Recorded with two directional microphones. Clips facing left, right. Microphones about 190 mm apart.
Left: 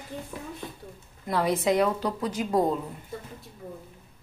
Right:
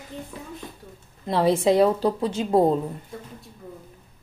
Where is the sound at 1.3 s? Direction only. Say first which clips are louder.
Right 5 dB; 30° right (ahead or behind).